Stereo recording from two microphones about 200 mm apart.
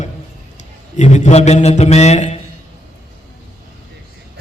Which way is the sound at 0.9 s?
35° left (ahead or behind).